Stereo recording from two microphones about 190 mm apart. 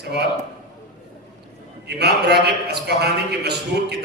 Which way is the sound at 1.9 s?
60° right (ahead or behind).